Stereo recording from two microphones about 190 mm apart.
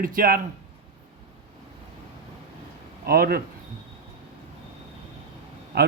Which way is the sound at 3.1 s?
50° right (ahead or behind).